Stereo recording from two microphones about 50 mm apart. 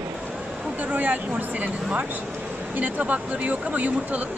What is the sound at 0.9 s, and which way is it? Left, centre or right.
Speech, right.